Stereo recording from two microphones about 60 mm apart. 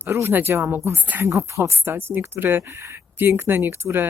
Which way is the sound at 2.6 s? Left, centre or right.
Right.